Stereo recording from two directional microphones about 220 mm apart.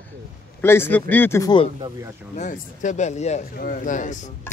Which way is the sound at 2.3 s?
35° left (ahead or behind).